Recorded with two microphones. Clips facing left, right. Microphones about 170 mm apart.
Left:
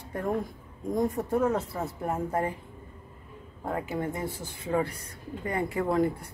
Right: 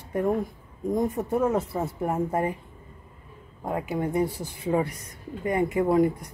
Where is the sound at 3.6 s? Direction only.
15° right (ahead or behind).